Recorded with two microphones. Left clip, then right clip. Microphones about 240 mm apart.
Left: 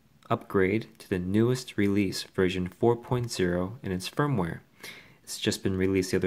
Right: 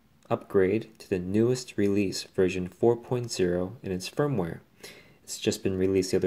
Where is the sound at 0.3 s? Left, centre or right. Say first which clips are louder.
Right 1 dB; left.